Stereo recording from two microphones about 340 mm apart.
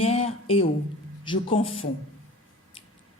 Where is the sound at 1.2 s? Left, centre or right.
Centre.